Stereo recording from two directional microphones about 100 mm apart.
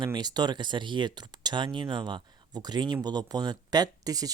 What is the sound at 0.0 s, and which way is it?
Speech, 45° right (ahead or behind).